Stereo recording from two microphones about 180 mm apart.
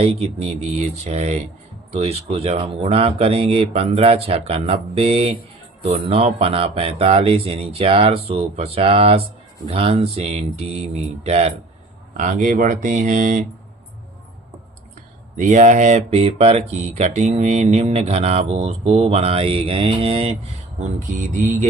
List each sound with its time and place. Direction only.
0.0 s speech: 35° right (ahead or behind)
15.4 s speech: 40° right (ahead or behind)